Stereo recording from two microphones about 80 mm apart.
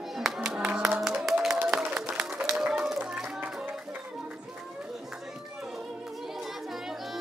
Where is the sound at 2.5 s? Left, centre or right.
Centre.